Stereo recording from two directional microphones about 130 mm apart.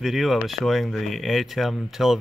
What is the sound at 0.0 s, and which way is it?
Speech, centre (ahead or behind).